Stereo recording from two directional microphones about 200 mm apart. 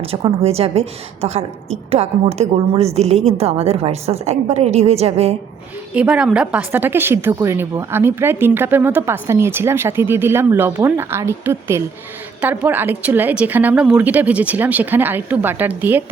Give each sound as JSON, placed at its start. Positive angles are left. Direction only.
{"t": 0.0, "sound": "a woman's voice", "side_deg": -30}
{"t": 5.9, "sound": "a woman's voice", "side_deg": -5}